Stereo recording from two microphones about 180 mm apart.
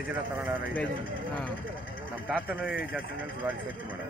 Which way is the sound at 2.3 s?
5° right (ahead or behind).